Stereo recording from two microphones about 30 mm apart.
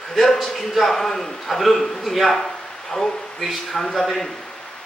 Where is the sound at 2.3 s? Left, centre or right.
Centre.